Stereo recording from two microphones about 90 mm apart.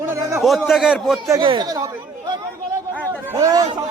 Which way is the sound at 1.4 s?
60° right (ahead or behind).